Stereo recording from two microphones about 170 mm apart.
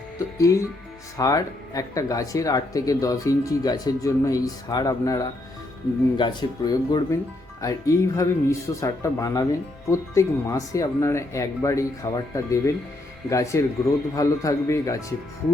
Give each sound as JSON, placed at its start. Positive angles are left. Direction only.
{"t": 0.3, "sound": "speech", "side_deg": 20}